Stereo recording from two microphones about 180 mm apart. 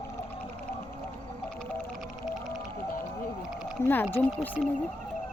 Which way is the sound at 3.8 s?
10° left (ahead or behind).